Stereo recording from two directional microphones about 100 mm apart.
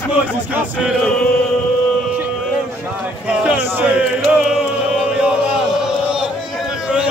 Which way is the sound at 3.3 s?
15° right (ahead or behind).